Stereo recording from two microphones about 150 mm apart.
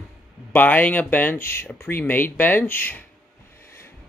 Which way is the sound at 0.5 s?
10° left (ahead or behind).